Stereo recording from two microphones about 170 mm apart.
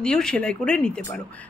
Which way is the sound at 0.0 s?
5° left (ahead or behind).